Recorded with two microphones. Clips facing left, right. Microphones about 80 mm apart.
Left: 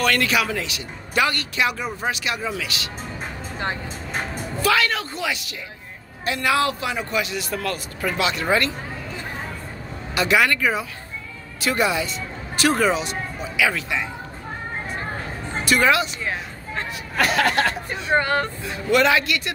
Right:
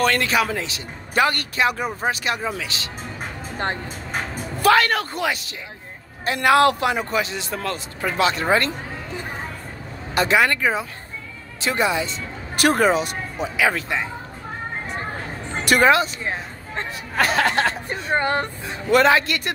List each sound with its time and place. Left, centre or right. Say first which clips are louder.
0.0 s speech: right 1 dB; right
4.6 s a man's voice: right 4 dB; right
7.0 s speech: right 1 dB; right
10.1 s speech: right 1 dB; right
12.5 s a man's voice: right 2 dB; right
15.5 s music: right 2 dB; right
15.8 s speech: right 4 dB; right